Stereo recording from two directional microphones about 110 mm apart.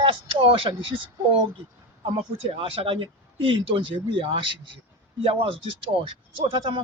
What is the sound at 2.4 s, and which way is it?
A man's voice, 55° right (ahead or behind).